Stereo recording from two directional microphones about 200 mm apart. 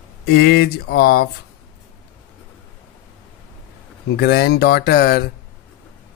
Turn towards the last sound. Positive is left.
turn(degrees=50)  # may be behind; listen again after turning